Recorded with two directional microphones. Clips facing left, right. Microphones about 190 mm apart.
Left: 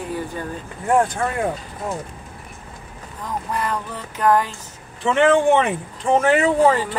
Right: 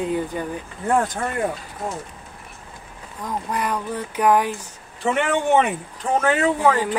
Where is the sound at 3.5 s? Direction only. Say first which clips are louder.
Right 1 dB; 15° right (ahead or behind).